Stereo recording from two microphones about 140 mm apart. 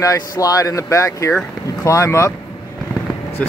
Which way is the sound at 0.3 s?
25° left (ahead or behind).